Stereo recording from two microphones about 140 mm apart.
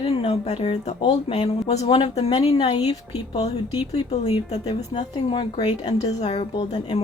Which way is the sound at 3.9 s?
50° left (ahead or behind).